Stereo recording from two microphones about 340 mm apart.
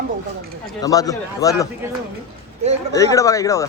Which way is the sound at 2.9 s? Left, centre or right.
Centre.